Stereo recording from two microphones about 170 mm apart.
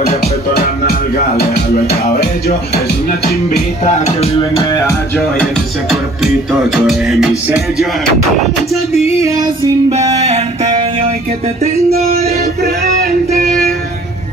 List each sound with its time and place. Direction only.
0.8 s music: 70° left (ahead or behind)
3.8 s music: 40° left (ahead or behind)
4.6 s music: 20° left (ahead or behind)
5.2 s speech: centre (ahead or behind)
9.2 s female singing: 20° right (ahead or behind)
10.1 s a sound: 40° right (ahead or behind)
12.3 s music: 65° right (ahead or behind)